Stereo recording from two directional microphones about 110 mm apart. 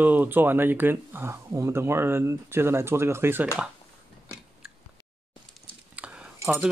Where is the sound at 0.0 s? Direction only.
15° right (ahead or behind).